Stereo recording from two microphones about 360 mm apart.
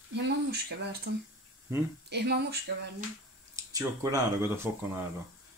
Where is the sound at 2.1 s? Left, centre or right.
Right.